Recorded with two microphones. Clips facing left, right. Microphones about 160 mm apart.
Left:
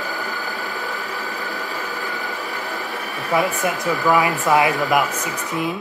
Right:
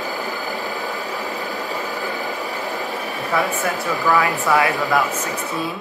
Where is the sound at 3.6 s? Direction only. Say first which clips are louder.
Left 1 dB; 15° left (ahead or behind).